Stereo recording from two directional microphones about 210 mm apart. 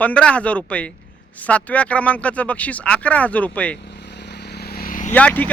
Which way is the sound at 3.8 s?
55° left (ahead or behind).